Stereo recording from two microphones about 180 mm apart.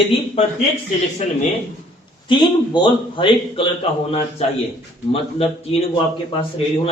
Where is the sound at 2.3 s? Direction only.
25° left (ahead or behind).